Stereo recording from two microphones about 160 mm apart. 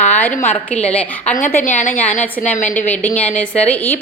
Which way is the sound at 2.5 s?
50° left (ahead or behind).